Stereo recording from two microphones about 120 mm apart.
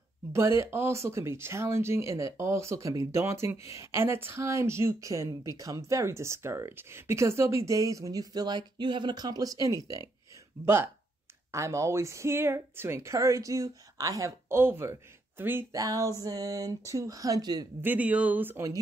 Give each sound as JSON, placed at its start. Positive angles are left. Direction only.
{"t": 0.3, "sound": "speech", "side_deg": -25}
{"t": 15.7, "sound": "speech", "side_deg": -30}
{"t": 17.8, "sound": "speech", "side_deg": -10}